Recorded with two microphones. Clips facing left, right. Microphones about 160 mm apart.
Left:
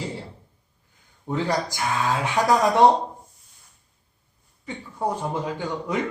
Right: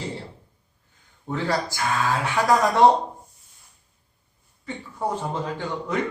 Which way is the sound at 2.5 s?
Centre (ahead or behind).